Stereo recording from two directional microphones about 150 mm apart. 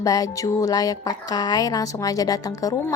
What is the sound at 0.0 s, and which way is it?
Speech, 25° left (ahead or behind).